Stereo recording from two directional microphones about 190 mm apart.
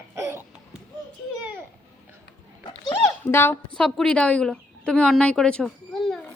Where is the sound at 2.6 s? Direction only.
25° left (ahead or behind).